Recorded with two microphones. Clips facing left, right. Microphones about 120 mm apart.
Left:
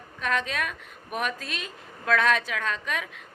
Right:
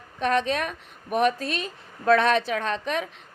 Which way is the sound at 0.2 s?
35° right (ahead or behind).